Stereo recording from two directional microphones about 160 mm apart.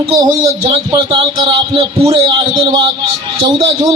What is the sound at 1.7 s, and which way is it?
Speech, 35° right (ahead or behind).